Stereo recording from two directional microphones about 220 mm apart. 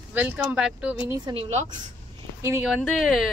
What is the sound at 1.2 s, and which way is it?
Speech, 25° right (ahead or behind).